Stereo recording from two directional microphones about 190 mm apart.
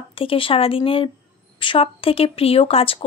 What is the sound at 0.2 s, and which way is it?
Speech, 30° left (ahead or behind).